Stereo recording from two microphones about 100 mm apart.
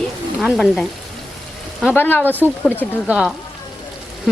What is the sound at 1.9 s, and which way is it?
Speech, 20° left (ahead or behind).